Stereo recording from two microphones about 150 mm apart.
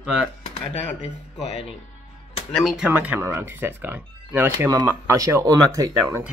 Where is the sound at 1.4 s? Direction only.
45° left (ahead or behind).